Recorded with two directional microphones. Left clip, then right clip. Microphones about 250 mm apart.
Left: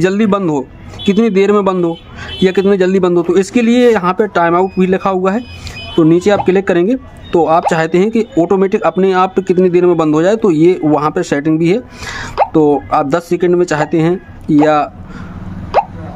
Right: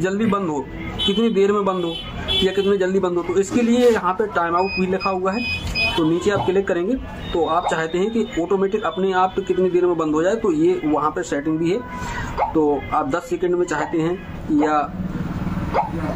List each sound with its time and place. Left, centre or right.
0.0 s speech: left